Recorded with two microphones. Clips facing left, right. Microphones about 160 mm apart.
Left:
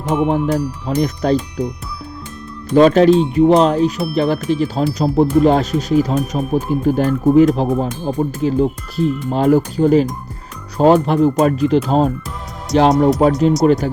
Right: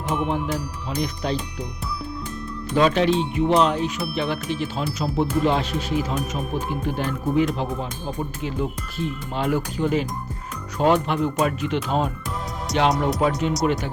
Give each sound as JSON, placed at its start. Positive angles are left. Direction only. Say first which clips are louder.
{"t": 0.3, "sound": "speech", "louder": "left 9 dB", "side_deg": 40}
{"t": 2.7, "sound": "speech", "louder": "left 9 dB", "side_deg": 40}
{"t": 12.7, "sound": "speech", "louder": "left 9 dB", "side_deg": 0}
{"t": 13.2, "sound": "speech", "louder": "left 9 dB", "side_deg": 40}